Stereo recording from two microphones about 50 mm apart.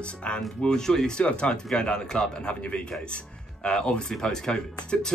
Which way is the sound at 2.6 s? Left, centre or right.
Left.